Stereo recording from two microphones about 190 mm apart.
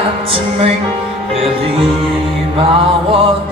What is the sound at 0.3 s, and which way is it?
Music, 30° right (ahead or behind).